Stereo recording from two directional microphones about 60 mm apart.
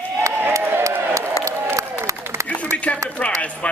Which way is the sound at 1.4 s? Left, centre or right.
Right.